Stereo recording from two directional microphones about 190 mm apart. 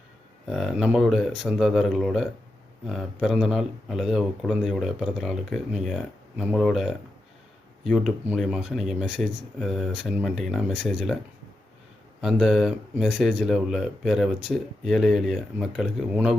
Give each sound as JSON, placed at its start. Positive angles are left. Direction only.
{"t": 0.4, "sound": "speech", "side_deg": 0}
{"t": 12.2, "sound": "speech", "side_deg": 0}